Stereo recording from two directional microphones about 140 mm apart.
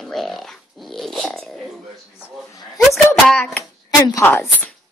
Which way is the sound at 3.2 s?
10° left (ahead or behind).